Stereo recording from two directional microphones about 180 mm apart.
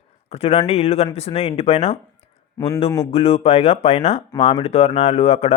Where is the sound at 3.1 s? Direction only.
35° left (ahead or behind).